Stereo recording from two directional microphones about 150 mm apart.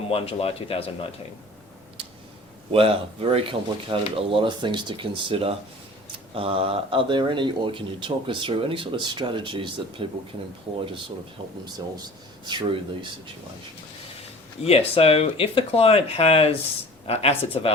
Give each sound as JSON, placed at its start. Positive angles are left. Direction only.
{"t": 0.1, "sound": "speech", "side_deg": 40}
{"t": 2.7, "sound": "speech", "side_deg": -40}
{"t": 12.5, "sound": "speech", "side_deg": -30}
{"t": 14.6, "sound": "speech", "side_deg": 40}